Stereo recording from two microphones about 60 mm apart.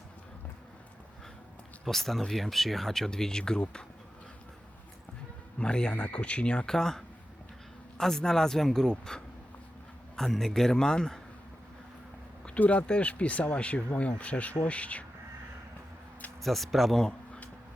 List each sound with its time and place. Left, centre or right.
1.8 s speech: centre
5.5 s speech: centre
12.5 s speech: left
16.4 s speech: centre
17.1 s a sound: centre